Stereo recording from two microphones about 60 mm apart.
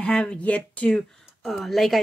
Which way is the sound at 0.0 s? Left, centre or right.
Centre.